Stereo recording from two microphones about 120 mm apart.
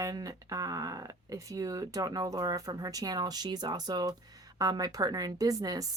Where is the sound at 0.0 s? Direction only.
30° right (ahead or behind).